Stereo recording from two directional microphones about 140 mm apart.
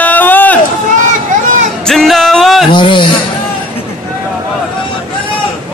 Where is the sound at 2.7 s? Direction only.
35° left (ahead or behind).